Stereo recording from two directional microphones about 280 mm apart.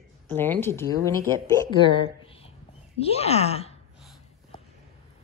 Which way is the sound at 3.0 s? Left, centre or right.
Left.